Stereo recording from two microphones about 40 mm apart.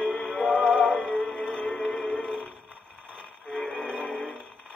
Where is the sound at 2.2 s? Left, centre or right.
Left.